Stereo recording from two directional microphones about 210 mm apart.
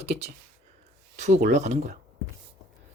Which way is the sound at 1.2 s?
30° right (ahead or behind).